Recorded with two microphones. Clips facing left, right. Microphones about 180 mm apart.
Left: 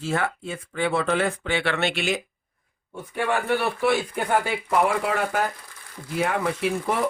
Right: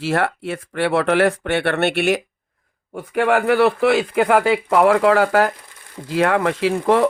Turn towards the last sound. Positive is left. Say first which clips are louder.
# right 8 dB
turn(degrees=-90)